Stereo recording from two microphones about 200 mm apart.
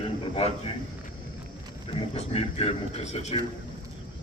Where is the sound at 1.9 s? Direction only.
30° left (ahead or behind).